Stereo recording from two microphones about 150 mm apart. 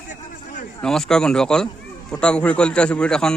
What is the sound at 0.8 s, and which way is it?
A man's voice, 5° left (ahead or behind).